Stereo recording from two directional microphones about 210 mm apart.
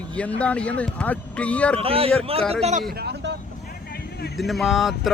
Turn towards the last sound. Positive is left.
turn(degrees=0)  # may be behind; listen again after turning